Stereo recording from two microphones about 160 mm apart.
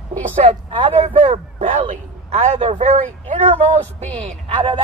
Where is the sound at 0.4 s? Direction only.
45° right (ahead or behind).